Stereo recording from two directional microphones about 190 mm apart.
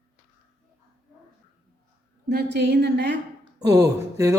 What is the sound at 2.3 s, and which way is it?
Speech, 60° right (ahead or behind).